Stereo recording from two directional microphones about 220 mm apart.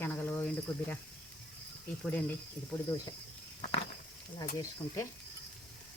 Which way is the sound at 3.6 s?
30° left (ahead or behind).